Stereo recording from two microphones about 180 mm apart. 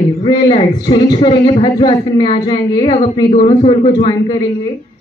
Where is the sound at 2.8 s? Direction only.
35° left (ahead or behind).